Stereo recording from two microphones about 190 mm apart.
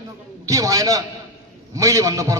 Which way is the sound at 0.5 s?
20° right (ahead or behind).